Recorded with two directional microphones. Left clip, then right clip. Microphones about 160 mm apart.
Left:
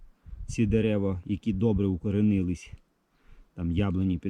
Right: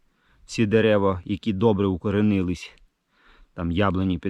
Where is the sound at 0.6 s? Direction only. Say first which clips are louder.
Right 8 dB; 15° left (ahead or behind).